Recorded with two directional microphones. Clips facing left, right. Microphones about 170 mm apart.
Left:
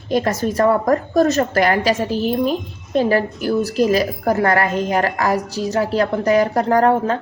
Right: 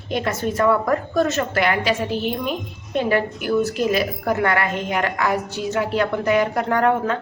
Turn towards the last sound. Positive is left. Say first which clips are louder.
# left 4 dB
turn(degrees=35)  # may be behind; listen again after turning